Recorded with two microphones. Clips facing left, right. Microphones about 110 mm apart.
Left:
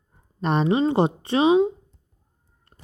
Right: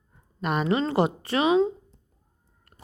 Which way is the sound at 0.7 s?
20° left (ahead or behind).